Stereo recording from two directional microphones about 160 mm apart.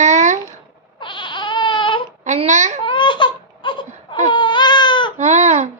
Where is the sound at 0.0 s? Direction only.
50° right (ahead or behind).